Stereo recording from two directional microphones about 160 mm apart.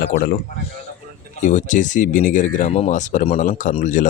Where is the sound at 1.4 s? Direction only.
50° left (ahead or behind).